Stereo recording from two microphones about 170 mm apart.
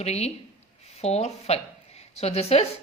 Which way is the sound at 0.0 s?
40° left (ahead or behind).